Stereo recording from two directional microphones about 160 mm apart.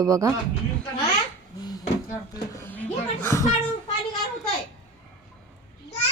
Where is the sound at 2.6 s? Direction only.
10° left (ahead or behind).